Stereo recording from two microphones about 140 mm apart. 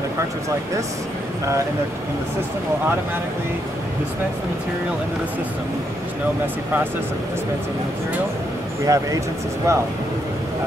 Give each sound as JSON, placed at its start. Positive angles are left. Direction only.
{"t": 6.4, "sound": "speech", "side_deg": -15}
{"t": 8.8, "sound": "speech", "side_deg": -25}